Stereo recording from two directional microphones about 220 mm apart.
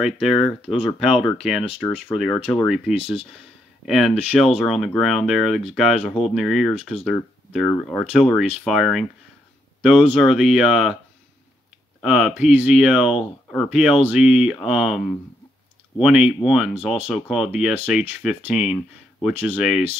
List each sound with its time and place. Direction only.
0.0 s speech: centre (ahead or behind)
12.0 s speech: centre (ahead or behind)